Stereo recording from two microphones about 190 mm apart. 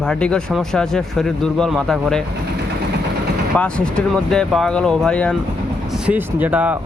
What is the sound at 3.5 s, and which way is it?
Speech, 5° left (ahead or behind).